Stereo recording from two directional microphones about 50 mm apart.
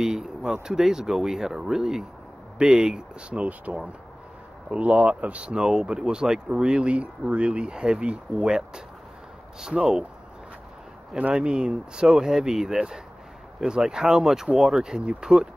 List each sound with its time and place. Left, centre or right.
0.0 s speech: centre
11.3 s speech: centre